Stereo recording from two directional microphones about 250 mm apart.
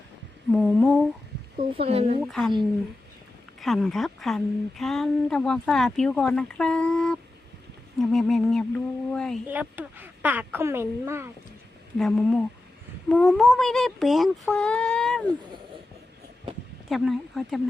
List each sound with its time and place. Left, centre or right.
0.5 s speech: centre
1.7 s speech: right
2.2 s speech: centre
3.6 s speech: centre
9.5 s speech: centre
11.9 s speech: centre
16.9 s speech: centre